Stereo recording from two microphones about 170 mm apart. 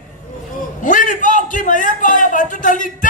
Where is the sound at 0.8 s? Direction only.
50° left (ahead or behind).